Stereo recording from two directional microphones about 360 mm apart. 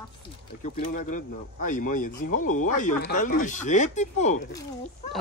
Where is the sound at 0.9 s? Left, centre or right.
Left.